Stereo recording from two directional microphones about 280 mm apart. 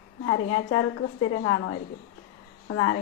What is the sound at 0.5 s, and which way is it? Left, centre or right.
A woman's voice, left.